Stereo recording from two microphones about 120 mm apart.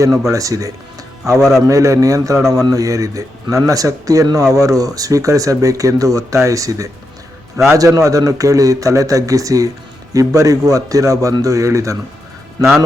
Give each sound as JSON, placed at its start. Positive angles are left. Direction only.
{"t": 0.2, "sound": "speech", "side_deg": -25}
{"t": 1.4, "sound": "a man's voice", "side_deg": 0}
{"t": 1.6, "sound": "speech", "side_deg": -25}